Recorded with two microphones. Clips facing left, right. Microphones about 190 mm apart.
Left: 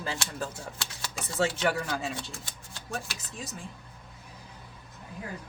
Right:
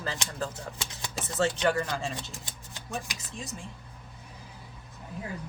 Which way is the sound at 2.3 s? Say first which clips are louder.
Even; 20° right (ahead or behind).